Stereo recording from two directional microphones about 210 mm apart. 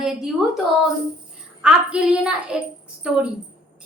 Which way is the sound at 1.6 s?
5° right (ahead or behind).